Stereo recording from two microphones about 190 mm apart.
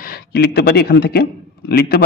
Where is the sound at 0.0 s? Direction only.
55° left (ahead or behind).